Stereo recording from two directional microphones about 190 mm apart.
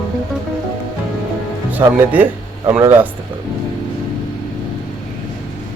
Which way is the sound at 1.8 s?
15° right (ahead or behind).